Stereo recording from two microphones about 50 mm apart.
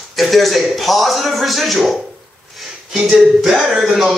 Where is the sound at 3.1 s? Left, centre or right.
Centre.